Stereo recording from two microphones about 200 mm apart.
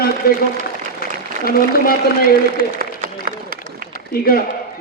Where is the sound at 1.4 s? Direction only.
50° left (ahead or behind).